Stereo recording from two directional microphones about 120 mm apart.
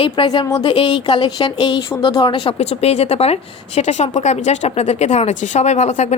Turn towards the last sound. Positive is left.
turn(degrees=70)  # may be behind; listen again after turning